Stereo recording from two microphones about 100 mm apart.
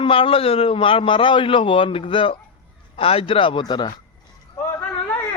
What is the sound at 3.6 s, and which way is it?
Speech, 45° left (ahead or behind).